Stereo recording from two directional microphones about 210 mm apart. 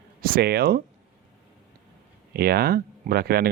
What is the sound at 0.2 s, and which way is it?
Speech, 45° right (ahead or behind).